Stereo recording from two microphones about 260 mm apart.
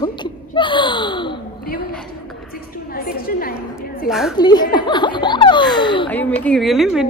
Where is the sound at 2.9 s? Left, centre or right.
Left.